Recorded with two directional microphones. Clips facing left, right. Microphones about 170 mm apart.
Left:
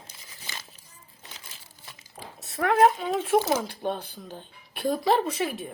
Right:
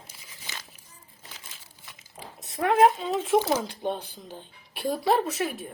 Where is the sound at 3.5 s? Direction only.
15° right (ahead or behind).